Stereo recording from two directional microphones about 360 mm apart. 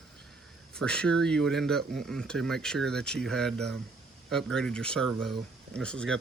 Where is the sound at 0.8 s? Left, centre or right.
Centre.